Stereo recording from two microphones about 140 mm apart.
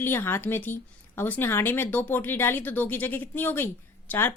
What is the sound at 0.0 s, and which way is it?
Speech, 15° left (ahead or behind).